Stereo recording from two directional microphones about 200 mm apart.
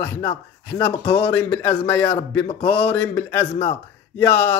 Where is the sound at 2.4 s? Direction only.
30° left (ahead or behind).